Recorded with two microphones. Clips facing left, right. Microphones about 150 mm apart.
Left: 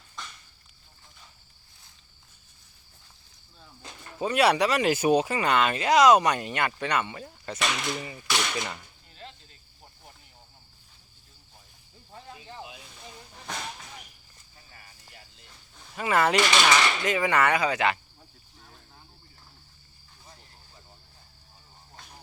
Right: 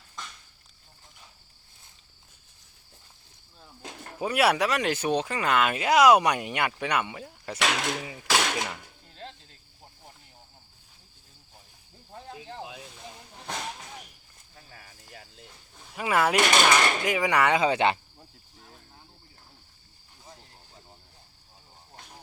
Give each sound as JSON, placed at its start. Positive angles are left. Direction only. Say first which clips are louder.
{"t": 4.2, "sound": "speech", "louder": "left 1 dB", "side_deg": -5}
{"t": 7.6, "sound": "speech", "louder": "right 2 dB", "side_deg": -75}
{"t": 14.5, "sound": "cricket", "louder": "right 4 dB", "side_deg": -90}
{"t": 16.0, "sound": "speech", "louder": "left 1 dB", "side_deg": -5}
{"t": 16.4, "sound": "speech", "louder": "right 1 dB", "side_deg": -50}
{"t": 17.0, "sound": "speech", "louder": "even", "side_deg": -10}